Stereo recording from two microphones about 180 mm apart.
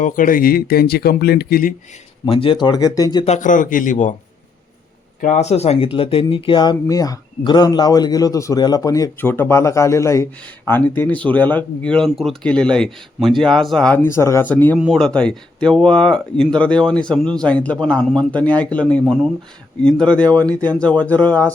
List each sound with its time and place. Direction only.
0.0 s speech: 50° left (ahead or behind)
2.2 s speech: 30° left (ahead or behind)
3.2 s a man's voice: 40° left (ahead or behind)
5.2 s speech: 40° left (ahead or behind); by 21.5 s 10° left (ahead or behind)